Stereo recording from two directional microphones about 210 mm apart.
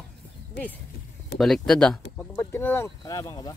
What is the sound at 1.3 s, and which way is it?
Speech, centre (ahead or behind).